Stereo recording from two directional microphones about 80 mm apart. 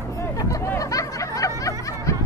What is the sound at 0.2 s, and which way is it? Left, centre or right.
Hubbub, left.